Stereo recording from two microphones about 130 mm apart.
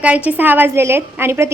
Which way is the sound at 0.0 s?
10° right (ahead or behind).